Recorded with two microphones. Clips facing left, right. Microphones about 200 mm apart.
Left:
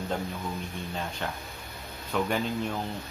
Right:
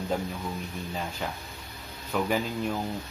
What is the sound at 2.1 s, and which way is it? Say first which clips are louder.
Speech: even; 5° right (ahead or behind).